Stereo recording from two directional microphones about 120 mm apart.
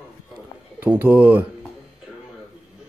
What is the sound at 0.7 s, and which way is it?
Speech, 15° right (ahead or behind).